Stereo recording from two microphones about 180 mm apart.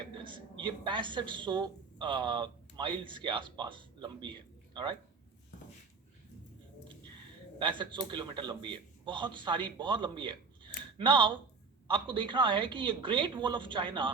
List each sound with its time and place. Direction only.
0.2 s a woman's voice: 25° right (ahead or behind)
7.6 s a man's voice: 25° right (ahead or behind)